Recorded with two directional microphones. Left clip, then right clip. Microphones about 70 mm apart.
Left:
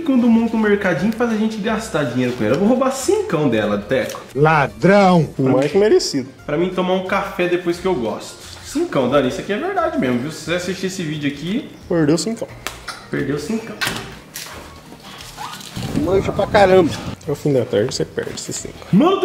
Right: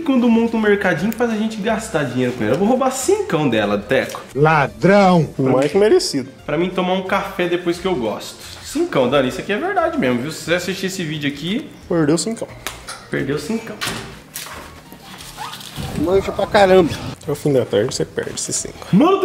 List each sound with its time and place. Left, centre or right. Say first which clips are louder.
0.0 s speech: right 1 dB; right
1.1 s speech: even; centre
4.1 s speech: left 2 dB; centre
11.9 s speech: even; centre
16.1 s speech: even; centre